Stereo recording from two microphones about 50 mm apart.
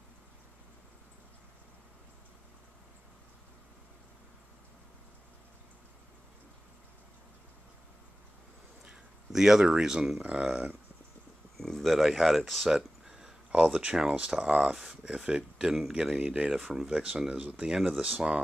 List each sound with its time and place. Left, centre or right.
8.8 s a sound: centre
9.8 s speech: centre
10.2 s speech: right
11.5 s speech: centre
15.5 s speech: centre
15.9 s speech: centre
17.7 s speech: centre